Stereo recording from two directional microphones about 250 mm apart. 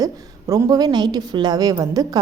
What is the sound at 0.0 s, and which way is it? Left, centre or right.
A woman's voice, centre.